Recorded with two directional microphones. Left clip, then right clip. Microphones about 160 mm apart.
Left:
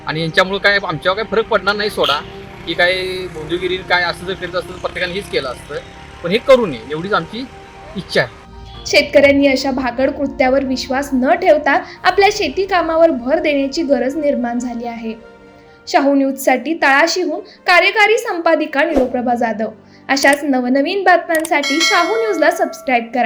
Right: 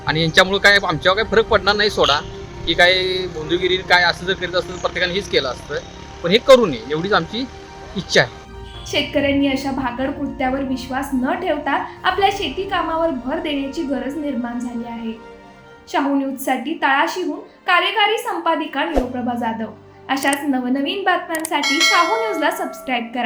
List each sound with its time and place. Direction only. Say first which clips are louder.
0.0 s a man's voice: even; 5° right (ahead or behind)
3.0 s speech: right 1 dB; 35° right (ahead or behind)
3.5 s a man's voice: right 1 dB; 5° right (ahead or behind)
8.9 s a woman's voice: left 9 dB; 40° left (ahead or behind)
21.6 s speech: left 1 dB; centre (ahead or behind)
22.3 s a woman's voice: left 6 dB; 35° left (ahead or behind)